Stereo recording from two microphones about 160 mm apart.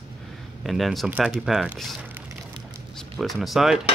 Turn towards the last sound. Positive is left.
turn(degrees=0)  # may be behind; listen again after turning